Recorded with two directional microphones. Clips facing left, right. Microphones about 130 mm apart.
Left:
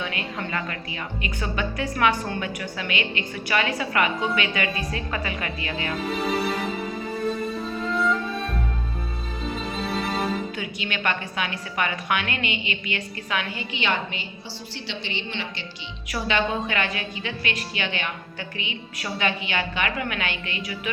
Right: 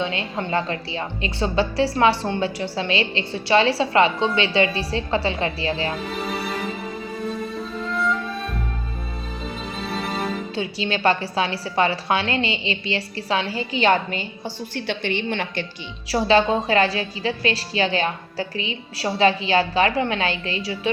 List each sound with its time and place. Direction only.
0.0 s a woman's voice: 25° right (ahead or behind)
6.1 s music: centre (ahead or behind)
7.8 s music: centre (ahead or behind)
9.7 s music: centre (ahead or behind)
10.5 s a woman's voice: 30° right (ahead or behind); by 15.6 s 50° right (ahead or behind)
16.0 s a woman's voice: 30° right (ahead or behind)